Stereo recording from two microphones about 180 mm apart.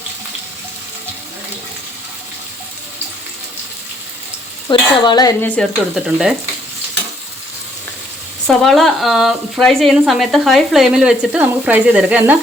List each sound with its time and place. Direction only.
4.7 s stir: 25° left (ahead or behind)
5.6 s a woman's voice: 5° left (ahead or behind)
8.4 s a woman's voice: centre (ahead or behind)